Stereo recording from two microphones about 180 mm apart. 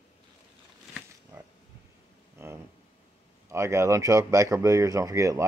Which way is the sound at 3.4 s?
15° right (ahead or behind).